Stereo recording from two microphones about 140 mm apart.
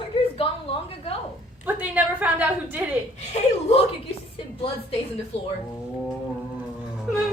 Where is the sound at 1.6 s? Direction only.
10° right (ahead or behind).